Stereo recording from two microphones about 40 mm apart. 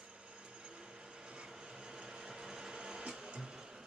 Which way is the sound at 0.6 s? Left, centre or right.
Right.